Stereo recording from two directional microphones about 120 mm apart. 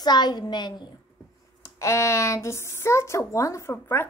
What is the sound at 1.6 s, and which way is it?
Speech, 25° left (ahead or behind).